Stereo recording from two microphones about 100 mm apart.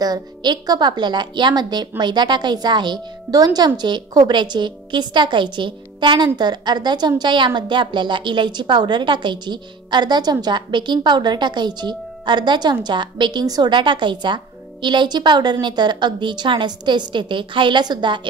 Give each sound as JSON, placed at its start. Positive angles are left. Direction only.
{"t": 0.0, "sound": "a woman's voice", "side_deg": -45}